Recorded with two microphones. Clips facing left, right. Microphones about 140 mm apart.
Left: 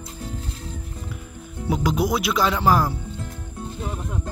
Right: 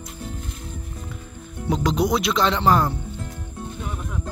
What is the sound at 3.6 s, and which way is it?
Music, 30° left (ahead or behind).